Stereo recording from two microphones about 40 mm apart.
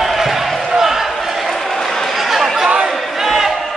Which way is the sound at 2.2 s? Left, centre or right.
Centre.